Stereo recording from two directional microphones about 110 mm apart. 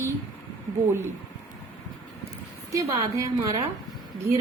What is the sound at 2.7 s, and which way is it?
Speech, 30° right (ahead or behind).